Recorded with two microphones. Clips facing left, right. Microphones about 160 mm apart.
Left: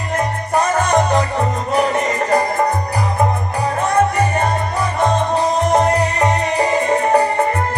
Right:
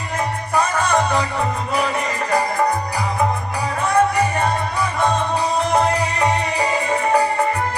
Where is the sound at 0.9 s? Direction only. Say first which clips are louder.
Left 3 dB; 35° left (ahead or behind).